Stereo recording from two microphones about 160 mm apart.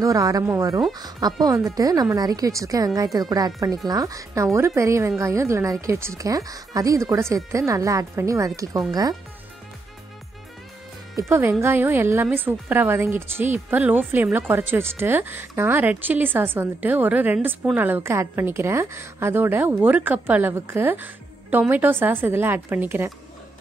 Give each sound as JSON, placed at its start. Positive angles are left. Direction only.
{"t": 0.0, "sound": "speech", "side_deg": -20}
{"t": 11.1, "sound": "a woman's voice", "side_deg": -15}